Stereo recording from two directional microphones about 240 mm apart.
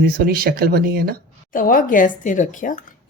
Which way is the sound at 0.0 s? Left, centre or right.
Right.